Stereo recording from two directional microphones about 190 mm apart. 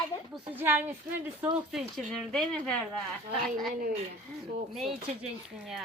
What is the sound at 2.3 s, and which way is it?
A child's voice, 5° left (ahead or behind).